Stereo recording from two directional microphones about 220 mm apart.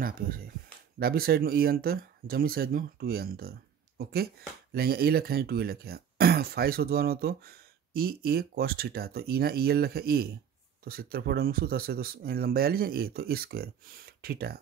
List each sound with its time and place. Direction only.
0.0 s speech: 40° right (ahead or behind)